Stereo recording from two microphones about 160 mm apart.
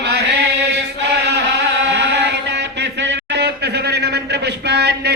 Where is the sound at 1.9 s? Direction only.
90° right.